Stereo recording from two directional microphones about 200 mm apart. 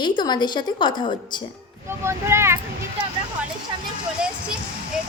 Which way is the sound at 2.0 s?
15° right (ahead or behind).